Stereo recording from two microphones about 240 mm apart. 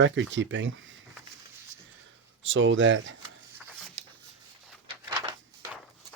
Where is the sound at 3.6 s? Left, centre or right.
Centre.